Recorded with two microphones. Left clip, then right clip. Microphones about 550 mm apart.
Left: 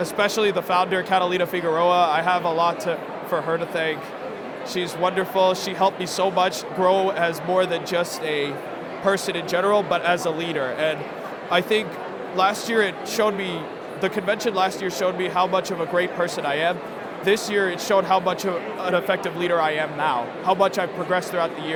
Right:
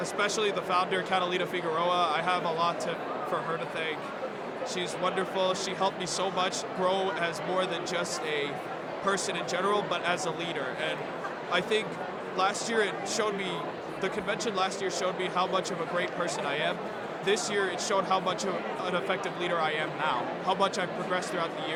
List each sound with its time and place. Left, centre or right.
0.0 s speech: left
4.7 s speech: left